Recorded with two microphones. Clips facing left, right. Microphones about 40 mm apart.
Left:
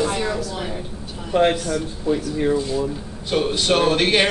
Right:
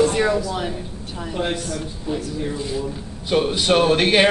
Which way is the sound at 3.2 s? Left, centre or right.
Centre.